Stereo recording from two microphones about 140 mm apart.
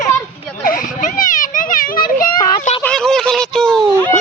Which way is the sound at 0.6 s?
80° left.